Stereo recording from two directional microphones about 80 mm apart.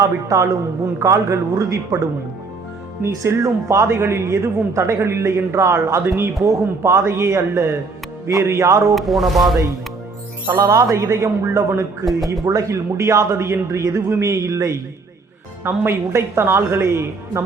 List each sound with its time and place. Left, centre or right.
0.0 s a man's voice: right
3.0 s a man's voice: right
9.0 s speech: centre
10.4 s speech: right
10.9 s a man's voice: right
15.6 s a man's voice: right